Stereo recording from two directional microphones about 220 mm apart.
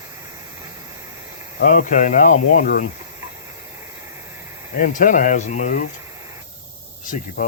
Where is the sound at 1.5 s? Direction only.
40° left (ahead or behind).